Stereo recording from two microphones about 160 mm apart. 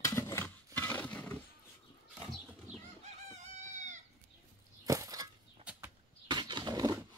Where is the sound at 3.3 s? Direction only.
45° right (ahead or behind).